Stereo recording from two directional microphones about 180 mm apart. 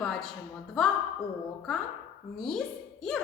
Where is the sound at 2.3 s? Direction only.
Centre (ahead or behind).